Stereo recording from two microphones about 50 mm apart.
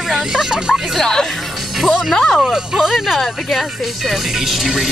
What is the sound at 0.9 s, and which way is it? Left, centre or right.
Speech, centre.